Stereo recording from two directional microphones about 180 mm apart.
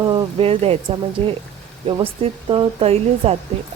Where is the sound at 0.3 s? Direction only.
35° right (ahead or behind).